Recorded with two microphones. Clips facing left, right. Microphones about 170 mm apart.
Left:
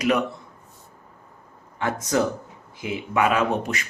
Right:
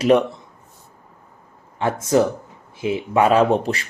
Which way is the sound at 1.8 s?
25° right (ahead or behind).